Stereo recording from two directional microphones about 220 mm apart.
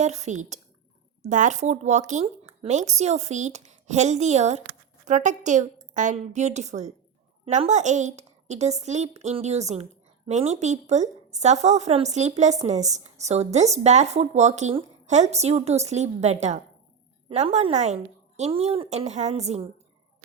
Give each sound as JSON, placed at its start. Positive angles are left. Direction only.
{"t": 0.0, "sound": "a child's voice", "side_deg": -30}